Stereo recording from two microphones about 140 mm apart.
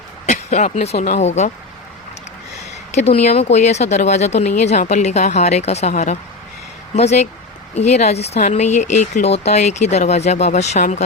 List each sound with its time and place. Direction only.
0.3 s speech: 55° left (ahead or behind)
2.9 s speech: 50° left (ahead or behind)